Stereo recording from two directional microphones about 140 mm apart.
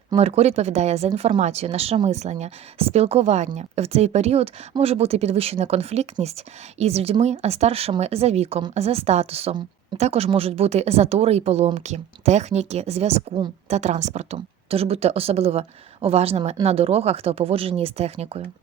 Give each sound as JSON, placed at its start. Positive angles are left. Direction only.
{"t": 0.2, "sound": "speech", "side_deg": -45}